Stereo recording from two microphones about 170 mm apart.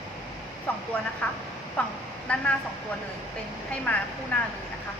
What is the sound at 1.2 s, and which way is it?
A woman's voice, 5° left (ahead or behind).